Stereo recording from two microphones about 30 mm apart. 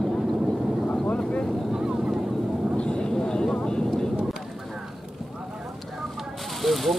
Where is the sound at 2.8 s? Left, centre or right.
Left.